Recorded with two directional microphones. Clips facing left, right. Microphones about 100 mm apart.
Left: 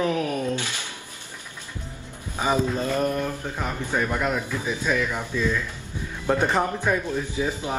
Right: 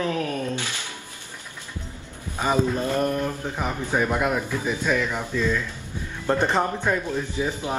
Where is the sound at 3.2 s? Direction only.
15° right (ahead or behind).